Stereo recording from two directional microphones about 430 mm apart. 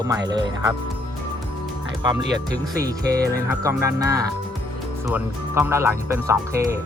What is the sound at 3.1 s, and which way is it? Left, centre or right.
Speech, right.